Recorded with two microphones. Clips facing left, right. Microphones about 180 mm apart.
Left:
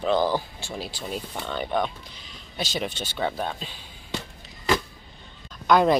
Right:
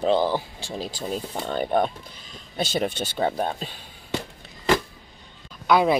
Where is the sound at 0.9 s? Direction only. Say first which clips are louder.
Right 3 dB; 40° right (ahead or behind).